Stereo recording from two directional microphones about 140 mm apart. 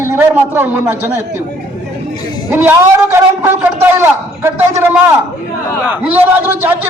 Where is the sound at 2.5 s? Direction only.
15° right (ahead or behind).